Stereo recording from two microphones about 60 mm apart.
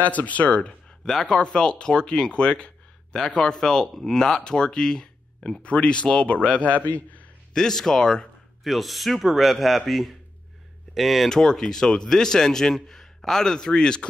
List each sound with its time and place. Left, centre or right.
0.0 s speech: left
7.5 s speech: centre
8.6 s a man's voice: centre